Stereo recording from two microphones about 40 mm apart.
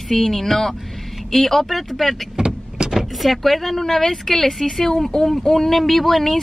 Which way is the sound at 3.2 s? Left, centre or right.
Centre.